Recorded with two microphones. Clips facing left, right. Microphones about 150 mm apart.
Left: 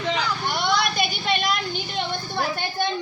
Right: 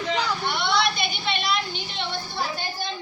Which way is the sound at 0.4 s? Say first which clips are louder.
Left 2 dB; 45° left (ahead or behind).